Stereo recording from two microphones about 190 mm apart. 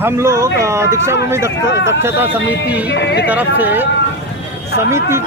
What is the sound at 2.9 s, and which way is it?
Speech, 65° left (ahead or behind).